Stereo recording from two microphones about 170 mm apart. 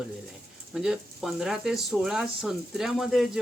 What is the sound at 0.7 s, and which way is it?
Speech, centre (ahead or behind).